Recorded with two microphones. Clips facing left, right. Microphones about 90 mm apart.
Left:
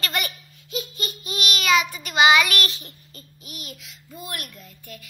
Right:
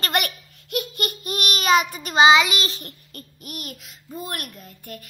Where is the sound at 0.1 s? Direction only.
60° right (ahead or behind); by 2.3 s 35° right (ahead or behind).